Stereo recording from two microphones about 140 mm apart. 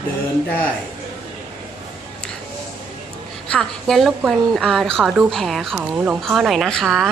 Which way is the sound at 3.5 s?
5° left (ahead or behind).